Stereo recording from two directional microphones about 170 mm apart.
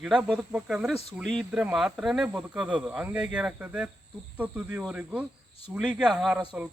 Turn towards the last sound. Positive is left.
turn(degrees=0)  # may be behind; listen again after turning